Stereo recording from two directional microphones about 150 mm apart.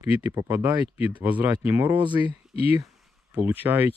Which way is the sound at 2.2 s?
40° left (ahead or behind).